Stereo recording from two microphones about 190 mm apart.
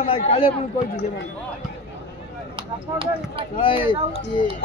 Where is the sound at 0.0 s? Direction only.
30° left (ahead or behind).